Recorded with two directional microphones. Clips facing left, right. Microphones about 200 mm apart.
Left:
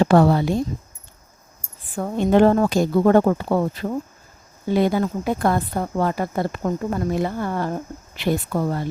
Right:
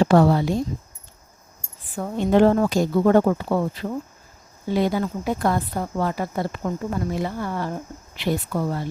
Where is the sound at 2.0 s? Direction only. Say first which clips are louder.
Left 1 dB; 55° left (ahead or behind).